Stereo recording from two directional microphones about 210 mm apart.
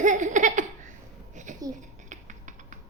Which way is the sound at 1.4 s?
35° right (ahead or behind).